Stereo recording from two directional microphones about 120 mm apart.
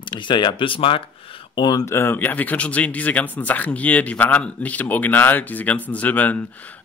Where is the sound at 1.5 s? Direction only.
35° left (ahead or behind).